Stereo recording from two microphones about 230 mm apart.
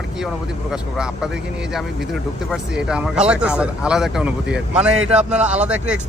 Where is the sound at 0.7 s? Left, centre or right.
Centre.